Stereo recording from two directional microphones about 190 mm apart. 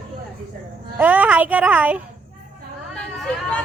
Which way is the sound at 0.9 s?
10° right (ahead or behind).